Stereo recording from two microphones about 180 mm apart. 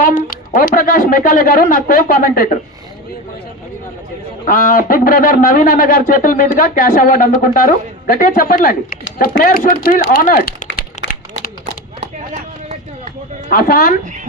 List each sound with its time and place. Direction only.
0.0 s a woman's voice: 45° left (ahead or behind)
4.4 s speech: 50° left (ahead or behind)
11.6 s a sound: 40° right (ahead or behind)
13.5 s speech: 55° left (ahead or behind)